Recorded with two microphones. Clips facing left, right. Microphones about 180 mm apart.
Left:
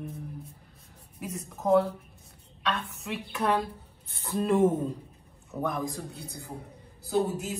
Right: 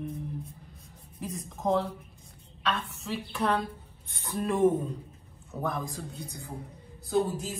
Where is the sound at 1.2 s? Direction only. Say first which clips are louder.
Even; centre (ahead or behind).